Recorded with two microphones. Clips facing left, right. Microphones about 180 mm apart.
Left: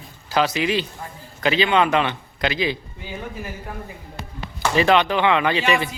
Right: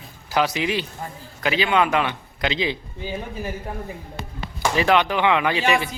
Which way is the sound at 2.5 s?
20° right (ahead or behind).